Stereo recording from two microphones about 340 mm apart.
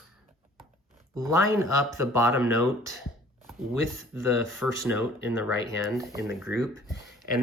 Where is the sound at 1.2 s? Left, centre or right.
Centre.